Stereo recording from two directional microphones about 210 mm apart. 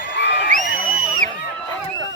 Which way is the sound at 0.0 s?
55° left (ahead or behind).